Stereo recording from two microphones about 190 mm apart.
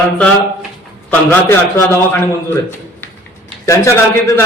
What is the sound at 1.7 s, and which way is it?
Speech, 15° left (ahead or behind).